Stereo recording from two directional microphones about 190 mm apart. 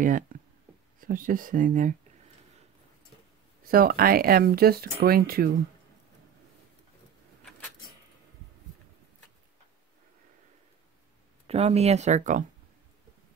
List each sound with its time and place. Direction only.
0.0 s speech: 45° right (ahead or behind)
3.6 s speech: 50° right (ahead or behind)
11.4 s speech: 35° right (ahead or behind)